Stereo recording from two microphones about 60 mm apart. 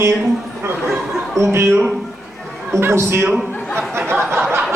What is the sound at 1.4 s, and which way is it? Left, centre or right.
Speech, right.